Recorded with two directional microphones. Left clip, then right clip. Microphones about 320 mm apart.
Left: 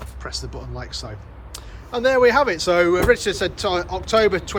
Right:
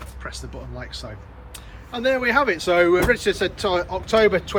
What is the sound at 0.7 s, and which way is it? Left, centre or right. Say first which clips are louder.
Speech: left 2 dB; centre.